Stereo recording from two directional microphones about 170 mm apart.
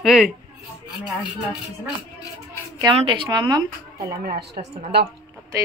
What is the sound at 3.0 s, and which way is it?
Speech, 30° right (ahead or behind).